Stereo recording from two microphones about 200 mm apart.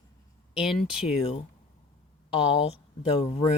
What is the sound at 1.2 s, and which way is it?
Speech, 30° left (ahead or behind).